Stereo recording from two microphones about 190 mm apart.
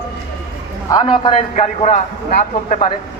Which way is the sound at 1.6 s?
40° left (ahead or behind).